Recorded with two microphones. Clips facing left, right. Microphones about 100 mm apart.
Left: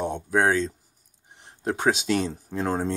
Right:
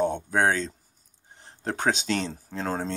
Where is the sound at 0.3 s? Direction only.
10° left (ahead or behind).